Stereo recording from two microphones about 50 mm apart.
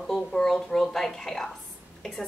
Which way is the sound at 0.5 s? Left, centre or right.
Centre.